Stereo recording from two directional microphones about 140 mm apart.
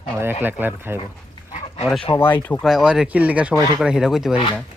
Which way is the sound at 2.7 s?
5° right (ahead or behind).